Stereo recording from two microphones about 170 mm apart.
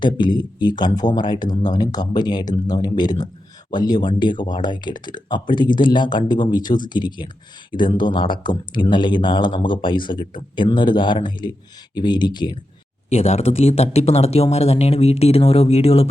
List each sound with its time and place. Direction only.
0.0 s speech: 25° left (ahead or behind)
13.1 s speech: 40° left (ahead or behind)